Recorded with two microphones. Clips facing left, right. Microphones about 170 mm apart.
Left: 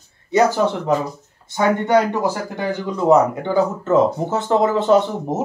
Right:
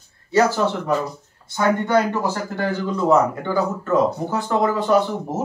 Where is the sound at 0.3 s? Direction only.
20° left (ahead or behind).